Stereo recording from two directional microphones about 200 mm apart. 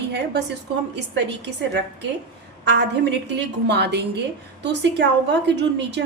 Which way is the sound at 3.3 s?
60° right (ahead or behind).